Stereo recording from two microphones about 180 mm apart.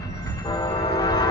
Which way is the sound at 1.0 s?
20° left (ahead or behind).